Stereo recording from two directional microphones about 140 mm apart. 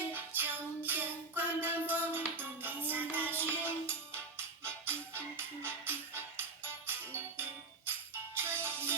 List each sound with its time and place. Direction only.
0.1 s music: 15° right (ahead or behind)